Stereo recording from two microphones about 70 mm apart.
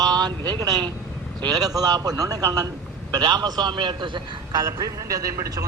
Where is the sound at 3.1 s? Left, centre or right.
Right.